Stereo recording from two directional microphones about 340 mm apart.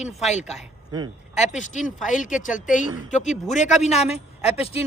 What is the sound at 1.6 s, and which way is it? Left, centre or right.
Speech, left.